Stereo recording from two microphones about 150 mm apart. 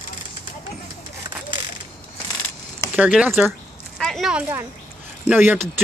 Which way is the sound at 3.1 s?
10° right (ahead or behind).